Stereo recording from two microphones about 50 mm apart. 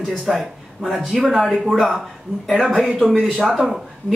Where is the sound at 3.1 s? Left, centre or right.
Centre.